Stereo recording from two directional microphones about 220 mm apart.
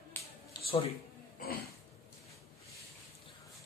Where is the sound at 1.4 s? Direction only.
40° left (ahead or behind).